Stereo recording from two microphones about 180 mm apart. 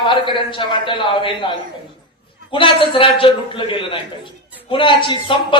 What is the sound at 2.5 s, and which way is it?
Speech, 30° left (ahead or behind).